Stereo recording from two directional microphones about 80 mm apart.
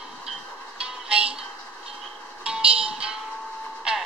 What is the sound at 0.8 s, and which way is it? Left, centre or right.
Music, centre.